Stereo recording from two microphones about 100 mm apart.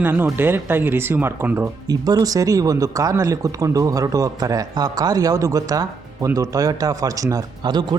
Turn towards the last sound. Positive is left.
turn(degrees=-45)  # may be behind; listen again after turning